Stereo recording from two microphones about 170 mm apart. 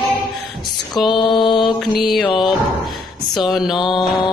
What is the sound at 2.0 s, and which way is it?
Mantra, centre (ahead or behind).